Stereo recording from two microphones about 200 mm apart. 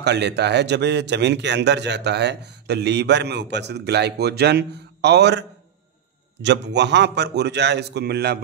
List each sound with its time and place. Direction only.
0.0 s a man's voice: 55° right (ahead or behind)
6.4 s a man's voice: 60° right (ahead or behind)